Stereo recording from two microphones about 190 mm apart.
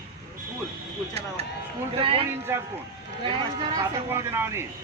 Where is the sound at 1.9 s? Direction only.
30° right (ahead or behind).